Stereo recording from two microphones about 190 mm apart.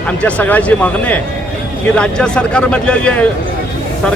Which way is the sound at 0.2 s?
5° left (ahead or behind).